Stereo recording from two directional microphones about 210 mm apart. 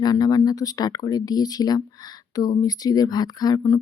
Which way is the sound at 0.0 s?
20° left (ahead or behind).